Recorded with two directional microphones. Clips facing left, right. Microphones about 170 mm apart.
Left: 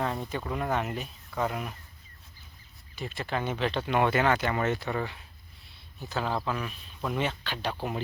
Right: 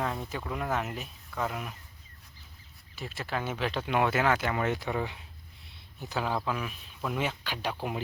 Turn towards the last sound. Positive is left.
turn(degrees=-10)  # may be behind; listen again after turning